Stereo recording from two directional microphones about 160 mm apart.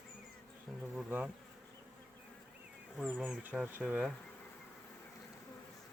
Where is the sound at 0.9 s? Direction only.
10° right (ahead or behind).